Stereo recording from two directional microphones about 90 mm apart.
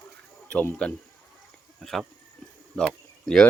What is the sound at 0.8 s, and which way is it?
Speech, 15° left (ahead or behind).